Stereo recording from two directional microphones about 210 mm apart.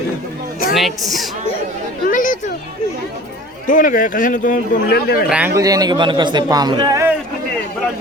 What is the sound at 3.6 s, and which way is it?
Speech, 40° left (ahead or behind).